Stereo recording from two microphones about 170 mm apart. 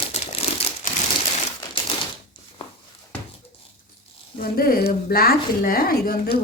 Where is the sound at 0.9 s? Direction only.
50° left (ahead or behind).